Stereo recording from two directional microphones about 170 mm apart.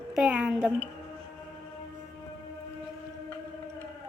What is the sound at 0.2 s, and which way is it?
Speech, 10° right (ahead or behind).